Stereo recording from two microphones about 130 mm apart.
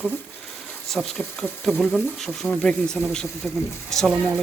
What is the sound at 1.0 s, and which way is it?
Speech, 5° left (ahead or behind).